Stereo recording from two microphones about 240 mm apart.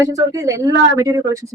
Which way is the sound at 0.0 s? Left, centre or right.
Centre.